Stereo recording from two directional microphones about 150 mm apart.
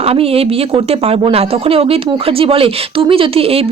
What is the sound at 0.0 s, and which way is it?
Speech, 40° right (ahead or behind).